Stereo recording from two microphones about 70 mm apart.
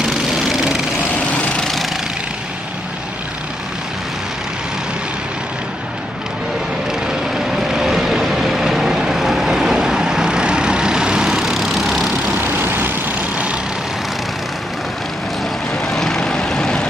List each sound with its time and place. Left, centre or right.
0.0 s lawn mower: centre
1.3 s vehicle: centre
7.7 s vehicle: centre
12.4 s vehicle: right
15.9 s vehicle: centre